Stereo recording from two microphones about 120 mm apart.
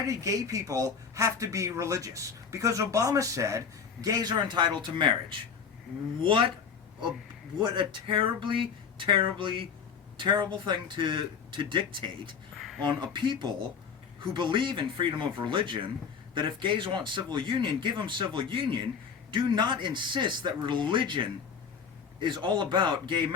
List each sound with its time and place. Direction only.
0.1 s speech: 25° right (ahead or behind); by 6.5 s 45° right (ahead or behind)
7.6 s speech: 40° right (ahead or behind)
12.5 s a sound: centre (ahead or behind)
12.8 s speech: 40° right (ahead or behind)